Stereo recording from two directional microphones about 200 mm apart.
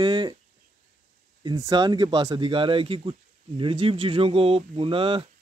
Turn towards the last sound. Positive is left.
turn(degrees=-25)  # may be behind; listen again after turning